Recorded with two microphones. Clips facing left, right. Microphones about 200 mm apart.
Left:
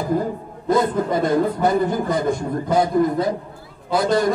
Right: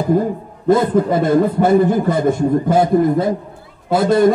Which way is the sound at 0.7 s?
25° right (ahead or behind).